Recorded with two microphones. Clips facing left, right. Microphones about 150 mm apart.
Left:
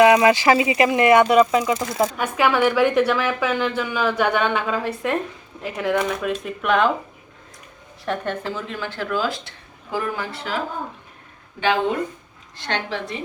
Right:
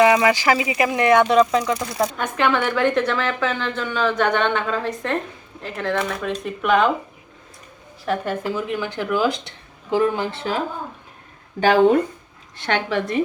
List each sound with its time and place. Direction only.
0.1 s speech: 10° left (ahead or behind)
0.4 s speech: 25° left (ahead or behind)
1.2 s a woman's voice: 5° left (ahead or behind)
8.0 s a woman's voice: 5° right (ahead or behind); by 10.5 s 25° right (ahead or behind)
11.6 s speech: 40° right (ahead or behind)
12.7 s a woman's voice: 55° right (ahead or behind)